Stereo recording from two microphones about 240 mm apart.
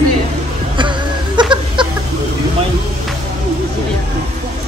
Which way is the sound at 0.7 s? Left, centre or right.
Centre.